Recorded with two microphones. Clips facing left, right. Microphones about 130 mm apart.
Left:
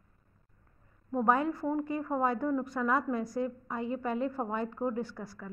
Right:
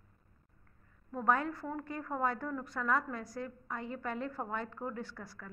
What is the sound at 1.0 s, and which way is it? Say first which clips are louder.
A woman's voice: left 4 dB; 20° left (ahead or behind).